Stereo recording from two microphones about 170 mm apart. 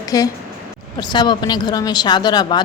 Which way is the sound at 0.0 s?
20° left (ahead or behind).